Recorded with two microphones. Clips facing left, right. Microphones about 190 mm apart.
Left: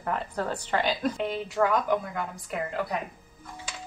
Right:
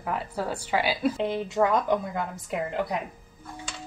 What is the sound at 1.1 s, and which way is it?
A woman's voice, 20° right (ahead or behind).